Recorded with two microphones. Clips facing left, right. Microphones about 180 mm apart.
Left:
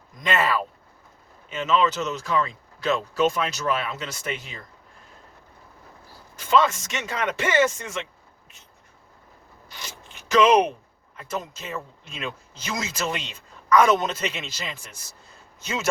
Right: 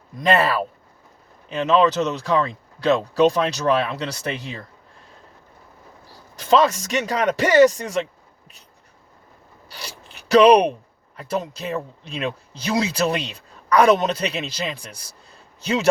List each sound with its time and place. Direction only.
0.2 s speech: 35° right (ahead or behind)
6.4 s speech: 35° right (ahead or behind)
9.6 s rub: 35° right (ahead or behind)
11.2 s speech: 35° right (ahead or behind)